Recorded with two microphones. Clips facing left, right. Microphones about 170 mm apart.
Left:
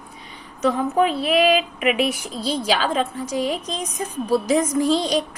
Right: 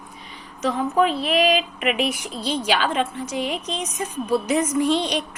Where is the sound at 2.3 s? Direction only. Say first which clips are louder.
Left 1 dB; 35° left (ahead or behind).